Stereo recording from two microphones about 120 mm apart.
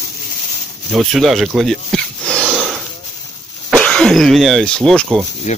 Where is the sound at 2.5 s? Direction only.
5° right (ahead or behind).